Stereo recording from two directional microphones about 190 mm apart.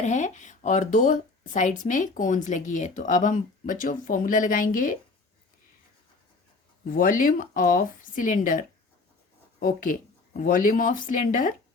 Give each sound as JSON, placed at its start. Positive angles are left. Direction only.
{"t": 0.0, "sound": "speech", "side_deg": 40}
{"t": 6.9, "sound": "speech", "side_deg": 45}